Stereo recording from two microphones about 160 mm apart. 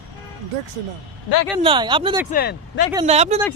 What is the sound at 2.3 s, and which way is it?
Speech, 75° left (ahead or behind).